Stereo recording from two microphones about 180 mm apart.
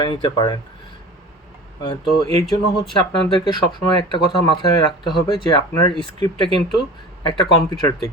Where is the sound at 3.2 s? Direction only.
25° left (ahead or behind).